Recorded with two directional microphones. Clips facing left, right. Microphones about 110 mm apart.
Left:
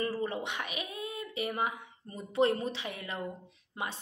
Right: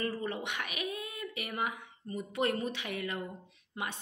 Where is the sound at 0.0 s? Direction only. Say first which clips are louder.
Left 2 dB; 25° left (ahead or behind).